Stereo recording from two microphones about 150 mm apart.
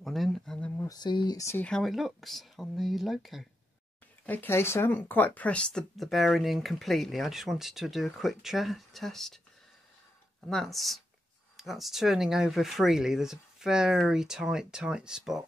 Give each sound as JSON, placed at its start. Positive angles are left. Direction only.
{"t": 0.0, "sound": "a sound", "side_deg": 0}
{"t": 0.8, "sound": "speech", "side_deg": 30}
{"t": 1.6, "sound": "speech", "side_deg": 5}
{"t": 4.3, "sound": "speech", "side_deg": 15}
{"t": 10.5, "sound": "speech", "side_deg": 0}